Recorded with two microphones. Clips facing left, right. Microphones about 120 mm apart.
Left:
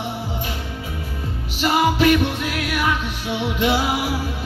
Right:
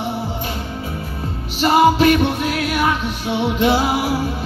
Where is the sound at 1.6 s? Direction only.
35° right (ahead or behind).